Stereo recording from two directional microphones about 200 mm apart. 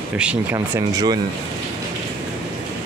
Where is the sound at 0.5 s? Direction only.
15° right (ahead or behind).